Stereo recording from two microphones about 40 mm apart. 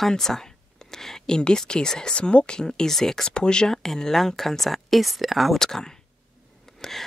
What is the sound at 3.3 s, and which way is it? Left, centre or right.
Speech, left.